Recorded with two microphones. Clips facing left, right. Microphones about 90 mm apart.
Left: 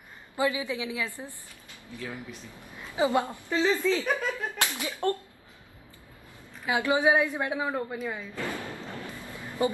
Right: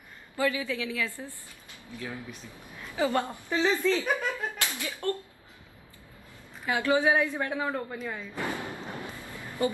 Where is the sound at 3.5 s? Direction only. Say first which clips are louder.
Left 1 dB; 5° right (ahead or behind).